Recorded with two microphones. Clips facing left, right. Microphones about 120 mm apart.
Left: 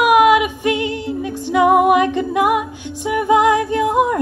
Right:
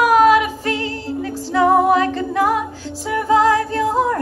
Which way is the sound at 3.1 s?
15° left (ahead or behind).